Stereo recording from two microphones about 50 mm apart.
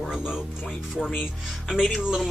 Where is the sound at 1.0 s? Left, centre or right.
Centre.